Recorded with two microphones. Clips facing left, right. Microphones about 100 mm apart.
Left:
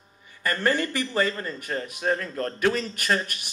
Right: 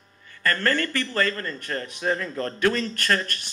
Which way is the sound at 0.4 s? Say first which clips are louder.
Right 1 dB; 15° left (ahead or behind).